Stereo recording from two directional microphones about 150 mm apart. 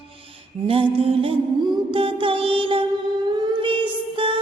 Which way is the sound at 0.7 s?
35° right (ahead or behind).